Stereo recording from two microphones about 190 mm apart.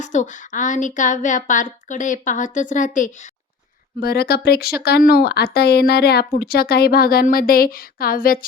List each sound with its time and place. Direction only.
0.0 s speech: 40° left (ahead or behind)
4.0 s speech: 55° left (ahead or behind)